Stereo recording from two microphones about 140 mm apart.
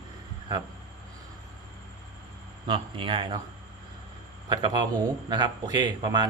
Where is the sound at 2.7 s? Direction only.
35° right (ahead or behind).